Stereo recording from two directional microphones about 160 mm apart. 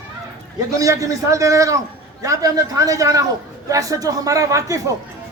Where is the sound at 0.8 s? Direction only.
20° right (ahead or behind).